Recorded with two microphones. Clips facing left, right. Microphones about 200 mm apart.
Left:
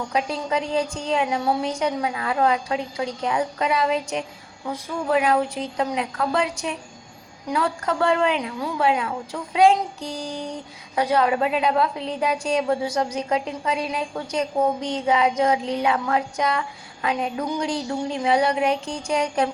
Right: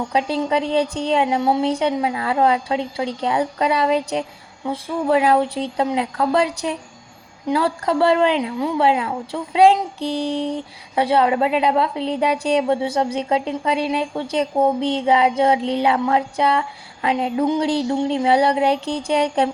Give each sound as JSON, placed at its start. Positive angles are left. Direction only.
{"t": 0.1, "sound": "a woman's voice", "side_deg": -30}